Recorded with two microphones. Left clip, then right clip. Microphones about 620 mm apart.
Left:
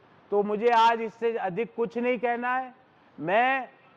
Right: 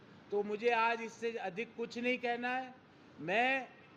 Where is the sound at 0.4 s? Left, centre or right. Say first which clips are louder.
Left 11 dB; left.